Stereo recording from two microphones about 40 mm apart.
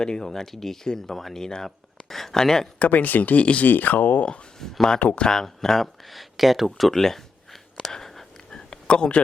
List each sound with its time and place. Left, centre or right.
0.0 s speech: centre
2.7 s speech: left
4.6 s speech: centre
4.9 s speech: left
5.2 s speech: centre
7.8 s whispering: centre
8.5 s a sound: left